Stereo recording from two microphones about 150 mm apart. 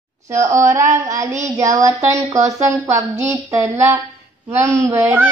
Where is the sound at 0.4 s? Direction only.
20° right (ahead or behind).